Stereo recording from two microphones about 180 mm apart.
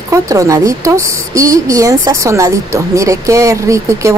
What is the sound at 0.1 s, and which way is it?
Speech, 15° right (ahead or behind).